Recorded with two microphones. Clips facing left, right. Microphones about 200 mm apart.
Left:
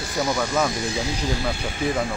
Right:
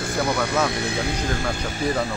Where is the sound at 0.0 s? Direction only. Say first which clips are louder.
Right 1 dB; 55° right (ahead or behind).